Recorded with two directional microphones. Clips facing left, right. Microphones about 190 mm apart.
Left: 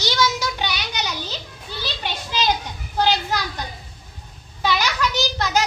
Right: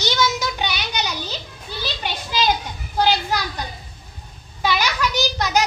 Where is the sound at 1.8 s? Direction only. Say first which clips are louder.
Right 1 dB; 10° right (ahead or behind).